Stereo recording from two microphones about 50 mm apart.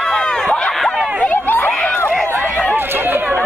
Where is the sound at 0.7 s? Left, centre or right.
Centre.